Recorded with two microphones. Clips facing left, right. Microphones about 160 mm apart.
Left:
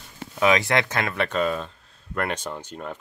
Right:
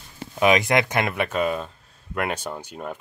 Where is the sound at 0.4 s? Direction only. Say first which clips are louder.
Right 2 dB; 15° right (ahead or behind).